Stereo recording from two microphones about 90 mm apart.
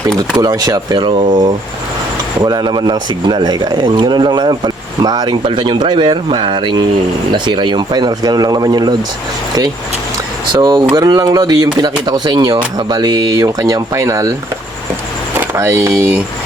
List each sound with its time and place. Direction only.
0.2 s speech: 45° right (ahead or behind)
10.5 s speech: 60° right (ahead or behind); by 14.3 s 40° right (ahead or behind)
15.5 s speech: 30° right (ahead or behind)